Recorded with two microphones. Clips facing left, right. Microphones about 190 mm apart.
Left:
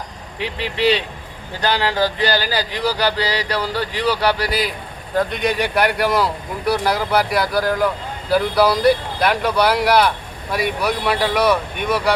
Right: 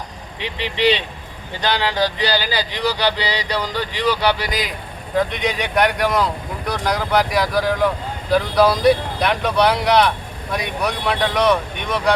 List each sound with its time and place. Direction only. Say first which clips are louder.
0.3 s speech: left 1 dB; 5° left (ahead or behind)
4.4 s speech: left 3 dB; 35° left (ahead or behind)
5.1 s speech: left 1 dB; centre (ahead or behind)